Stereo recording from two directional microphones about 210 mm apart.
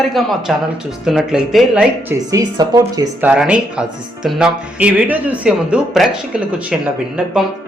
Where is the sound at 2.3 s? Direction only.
20° right (ahead or behind).